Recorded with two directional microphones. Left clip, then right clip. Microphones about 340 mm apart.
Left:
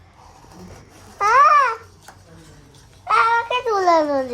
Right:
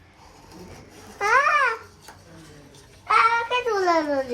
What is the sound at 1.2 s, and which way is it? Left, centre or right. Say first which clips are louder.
Babbling: left 6 dB; centre.